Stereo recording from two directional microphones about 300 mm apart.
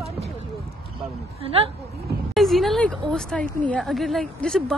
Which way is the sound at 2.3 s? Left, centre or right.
Centre.